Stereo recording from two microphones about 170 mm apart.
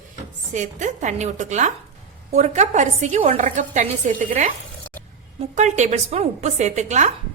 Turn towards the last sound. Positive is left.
turn(degrees=-45)  # may be behind; listen again after turning